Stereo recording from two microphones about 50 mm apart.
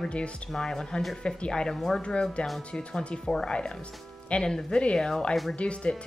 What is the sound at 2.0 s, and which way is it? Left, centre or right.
Speech, left.